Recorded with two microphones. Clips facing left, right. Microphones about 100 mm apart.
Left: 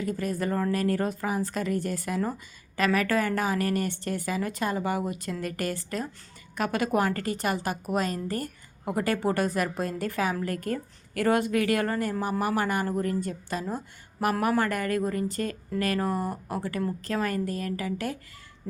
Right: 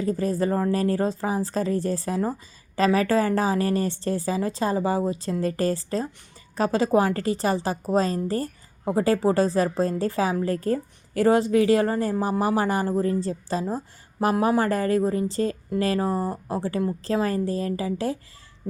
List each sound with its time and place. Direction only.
0.0 s a woman's voice: 30° right (ahead or behind)
14.3 s a woman's voice: 20° right (ahead or behind)
14.6 s a woman's voice: 30° right (ahead or behind)